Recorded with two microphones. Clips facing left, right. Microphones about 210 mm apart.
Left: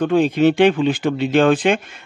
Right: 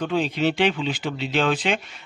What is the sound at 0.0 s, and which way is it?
Speech, 50° left (ahead or behind).